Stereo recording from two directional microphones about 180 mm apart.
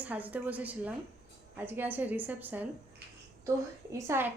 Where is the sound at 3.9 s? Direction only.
15° right (ahead or behind).